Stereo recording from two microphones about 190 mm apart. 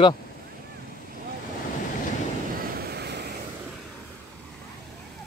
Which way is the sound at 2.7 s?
55° right (ahead or behind).